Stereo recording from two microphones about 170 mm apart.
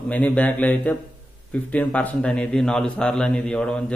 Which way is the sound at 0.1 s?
10° left (ahead or behind).